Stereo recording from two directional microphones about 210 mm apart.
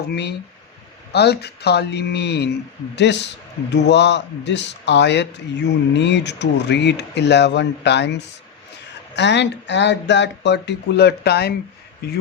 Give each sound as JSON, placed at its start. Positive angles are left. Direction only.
{"t": 0.1, "sound": "a man's voice", "side_deg": 50}